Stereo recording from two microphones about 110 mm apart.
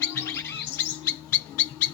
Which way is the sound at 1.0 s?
15° left (ahead or behind).